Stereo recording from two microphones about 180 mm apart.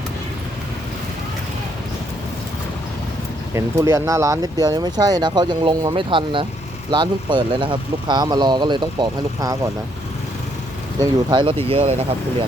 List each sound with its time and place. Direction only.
3.5 s speech: 15° right (ahead or behind)
11.0 s speech: 25° right (ahead or behind)